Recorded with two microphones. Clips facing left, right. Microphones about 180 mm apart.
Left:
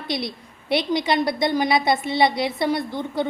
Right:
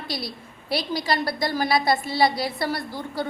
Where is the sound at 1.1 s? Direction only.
20° left (ahead or behind).